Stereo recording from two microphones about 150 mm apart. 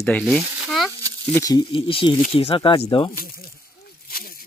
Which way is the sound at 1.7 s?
35° left (ahead or behind).